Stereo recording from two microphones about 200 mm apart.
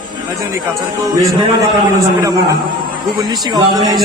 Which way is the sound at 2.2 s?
15° right (ahead or behind).